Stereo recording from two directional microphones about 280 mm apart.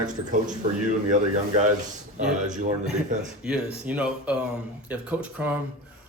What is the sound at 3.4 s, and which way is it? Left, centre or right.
A man's voice, centre.